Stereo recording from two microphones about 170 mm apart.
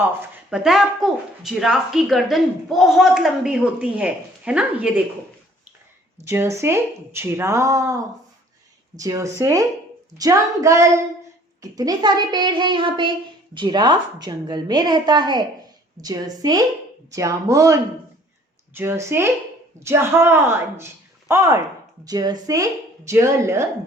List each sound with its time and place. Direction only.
0.0 s speech: 15° right (ahead or behind)
0.6 s speech: centre (ahead or behind)
6.2 s a child's voice: 15° right (ahead or behind)